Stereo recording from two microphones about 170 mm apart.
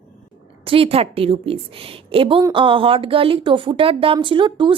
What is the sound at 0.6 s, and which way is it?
A woman's voice, 30° right (ahead or behind).